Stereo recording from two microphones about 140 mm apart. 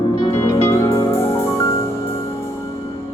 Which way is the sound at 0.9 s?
20° left (ahead or behind).